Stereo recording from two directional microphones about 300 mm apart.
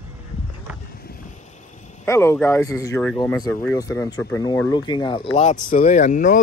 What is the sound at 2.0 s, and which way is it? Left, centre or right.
Speech, centre.